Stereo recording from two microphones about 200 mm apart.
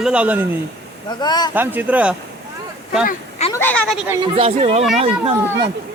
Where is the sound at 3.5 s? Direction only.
10° left (ahead or behind).